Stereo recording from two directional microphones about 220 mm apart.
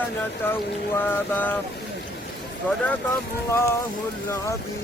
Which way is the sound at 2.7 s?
5° left (ahead or behind).